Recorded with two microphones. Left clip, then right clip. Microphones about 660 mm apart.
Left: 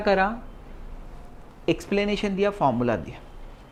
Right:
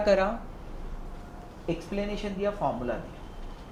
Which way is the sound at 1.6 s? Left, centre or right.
Left.